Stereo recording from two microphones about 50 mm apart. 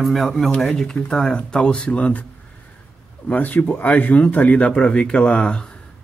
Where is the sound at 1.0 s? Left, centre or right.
Centre.